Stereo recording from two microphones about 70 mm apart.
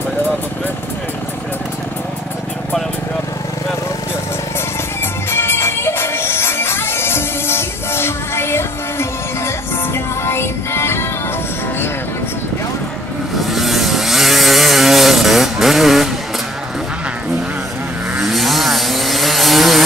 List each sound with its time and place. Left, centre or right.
5.3 s music: left
9.9 s music: left
13.4 s vehicle: centre
18.1 s chainsaw: centre